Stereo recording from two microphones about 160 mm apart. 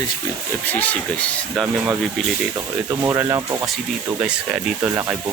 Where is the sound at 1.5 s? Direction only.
Centre (ahead or behind).